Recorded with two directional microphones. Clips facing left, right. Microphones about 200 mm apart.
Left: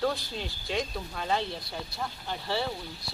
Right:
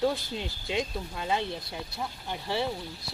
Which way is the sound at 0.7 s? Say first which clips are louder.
Right 1 dB; 15° right (ahead or behind).